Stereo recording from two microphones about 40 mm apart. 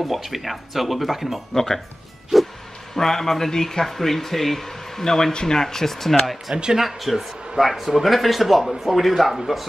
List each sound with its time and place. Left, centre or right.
0.0 s a man's voice: centre
1.5 s speech: centre
3.0 s speech: centre
6.5 s speech: right
6.8 s a man's voice: centre